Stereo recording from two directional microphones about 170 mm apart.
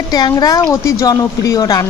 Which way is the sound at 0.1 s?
25° left (ahead or behind).